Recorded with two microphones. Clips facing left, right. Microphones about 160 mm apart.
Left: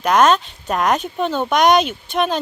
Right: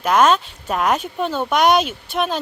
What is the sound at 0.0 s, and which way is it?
Speech, 5° right (ahead or behind).